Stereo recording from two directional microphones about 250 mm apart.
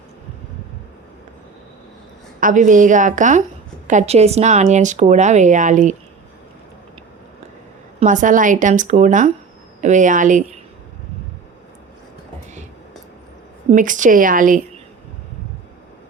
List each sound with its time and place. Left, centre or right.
2.4 s a woman's voice: right
7.9 s a woman's voice: right
13.7 s a woman's voice: right